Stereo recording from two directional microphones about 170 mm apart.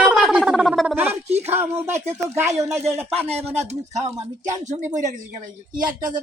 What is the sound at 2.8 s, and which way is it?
Speech, 40° right (ahead or behind).